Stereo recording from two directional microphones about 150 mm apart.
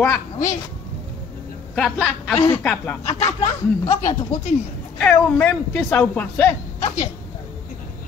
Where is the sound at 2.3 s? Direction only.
15° left (ahead or behind).